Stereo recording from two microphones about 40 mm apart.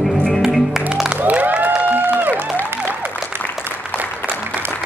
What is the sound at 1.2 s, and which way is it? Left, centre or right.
Music, right.